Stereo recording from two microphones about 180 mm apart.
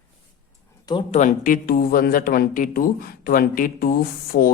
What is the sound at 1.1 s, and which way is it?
Speech, 45° left (ahead or behind).